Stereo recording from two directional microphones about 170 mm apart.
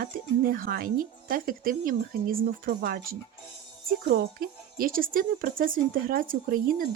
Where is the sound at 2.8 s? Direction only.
65° right (ahead or behind).